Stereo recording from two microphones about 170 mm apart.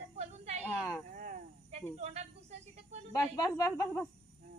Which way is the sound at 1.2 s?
50° right (ahead or behind).